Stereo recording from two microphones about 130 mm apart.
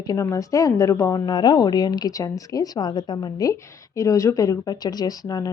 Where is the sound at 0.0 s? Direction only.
25° left (ahead or behind).